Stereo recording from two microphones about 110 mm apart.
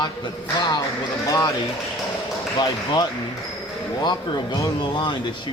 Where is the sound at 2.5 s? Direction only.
40° left (ahead or behind).